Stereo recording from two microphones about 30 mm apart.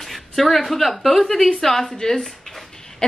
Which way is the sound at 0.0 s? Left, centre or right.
Centre.